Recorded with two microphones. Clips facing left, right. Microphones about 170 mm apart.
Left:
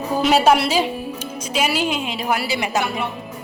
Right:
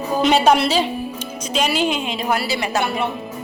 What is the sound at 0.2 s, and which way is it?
A woman's voice, 5° left (ahead or behind).